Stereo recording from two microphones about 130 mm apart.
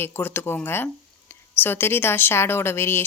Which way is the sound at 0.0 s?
15° left (ahead or behind).